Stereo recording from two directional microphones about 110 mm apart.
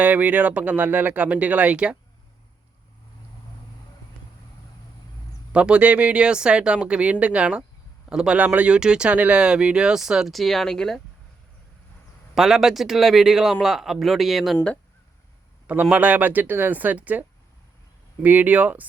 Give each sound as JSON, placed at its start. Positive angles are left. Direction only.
{"t": 0.0, "sound": "speech", "side_deg": -15}
{"t": 5.5, "sound": "speech", "side_deg": -10}
{"t": 12.3, "sound": "a man's voice", "side_deg": 0}
{"t": 15.6, "sound": "speech", "side_deg": -15}